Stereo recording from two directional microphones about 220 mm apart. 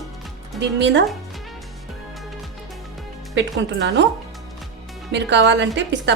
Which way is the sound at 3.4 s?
55° right (ahead or behind).